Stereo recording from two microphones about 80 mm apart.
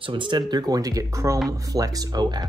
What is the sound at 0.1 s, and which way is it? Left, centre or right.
Speech, right.